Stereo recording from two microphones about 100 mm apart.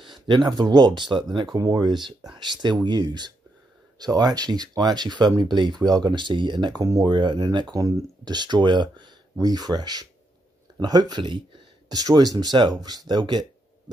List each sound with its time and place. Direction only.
0.0 s speech: 50° right (ahead or behind)
7.1 s speech: 50° right (ahead or behind)
7.7 s speech: 35° right (ahead or behind)
8.4 s speech: 50° right (ahead or behind)